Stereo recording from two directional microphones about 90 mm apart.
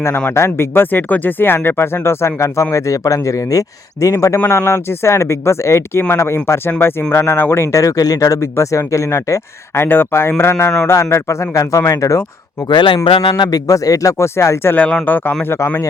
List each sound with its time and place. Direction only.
0.3 s speech: 30° left (ahead or behind)
8.4 s speech: 30° left (ahead or behind)
9.8 s speech: 25° left (ahead or behind)
12.6 s speech: 60° left (ahead or behind)
13.1 s a man's voice: 80° left; by 13.6 s 60° left (ahead or behind)
13.7 s speech: 40° left (ahead or behind); by 15.5 s 20° left (ahead or behind)
15.5 s speech: 30° left (ahead or behind)